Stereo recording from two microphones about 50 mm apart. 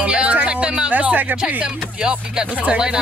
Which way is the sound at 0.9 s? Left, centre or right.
Right.